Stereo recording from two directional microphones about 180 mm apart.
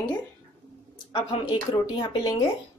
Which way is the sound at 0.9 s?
25° left (ahead or behind).